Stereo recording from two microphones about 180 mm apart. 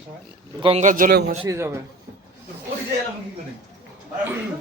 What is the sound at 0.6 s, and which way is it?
Speech, 35° right (ahead or behind).